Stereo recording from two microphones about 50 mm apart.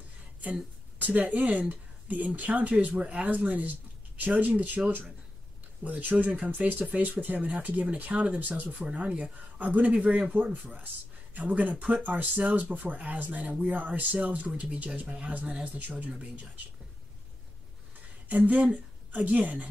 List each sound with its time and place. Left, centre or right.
0.4 s speech: right
11.3 s speech: right
18.4 s speech: right